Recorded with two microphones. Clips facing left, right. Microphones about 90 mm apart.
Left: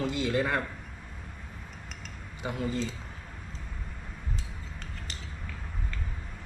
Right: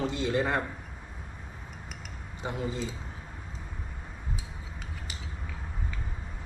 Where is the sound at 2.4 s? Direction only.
Centre (ahead or behind).